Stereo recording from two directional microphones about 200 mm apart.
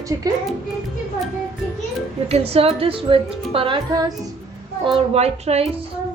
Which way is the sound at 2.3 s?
30° right (ahead or behind).